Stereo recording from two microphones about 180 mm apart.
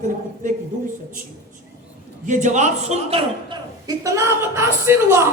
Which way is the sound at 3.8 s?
20° right (ahead or behind).